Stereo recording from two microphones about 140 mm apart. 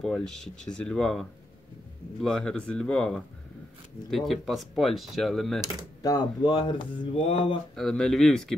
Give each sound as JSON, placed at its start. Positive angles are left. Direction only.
{"t": 0.0, "sound": "speech", "side_deg": 5}
{"t": 6.0, "sound": "speech", "side_deg": 30}
{"t": 7.7, "sound": "speech", "side_deg": 5}